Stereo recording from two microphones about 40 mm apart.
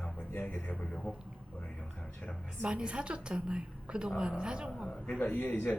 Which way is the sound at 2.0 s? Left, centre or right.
Left.